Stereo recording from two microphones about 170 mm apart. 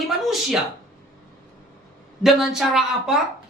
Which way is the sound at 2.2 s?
Centre (ahead or behind).